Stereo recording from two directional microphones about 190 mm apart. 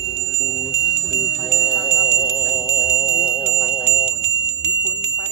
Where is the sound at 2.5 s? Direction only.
Centre (ahead or behind).